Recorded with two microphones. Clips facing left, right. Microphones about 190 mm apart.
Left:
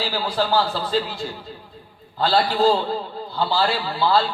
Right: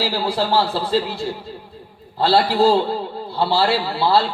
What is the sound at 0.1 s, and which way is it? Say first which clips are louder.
A man's voice: right 2 dB; 30° right (ahead or behind).